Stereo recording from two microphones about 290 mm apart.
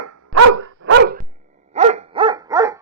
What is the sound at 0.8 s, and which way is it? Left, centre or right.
Dog, right.